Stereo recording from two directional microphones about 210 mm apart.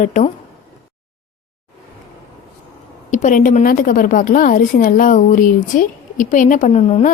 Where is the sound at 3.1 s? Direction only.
35° left (ahead or behind).